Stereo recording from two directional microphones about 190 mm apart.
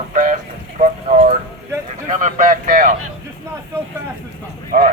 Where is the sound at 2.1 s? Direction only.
45° right (ahead or behind).